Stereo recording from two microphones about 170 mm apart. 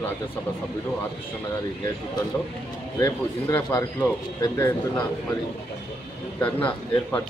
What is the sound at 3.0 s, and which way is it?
Speech, 15° left (ahead or behind).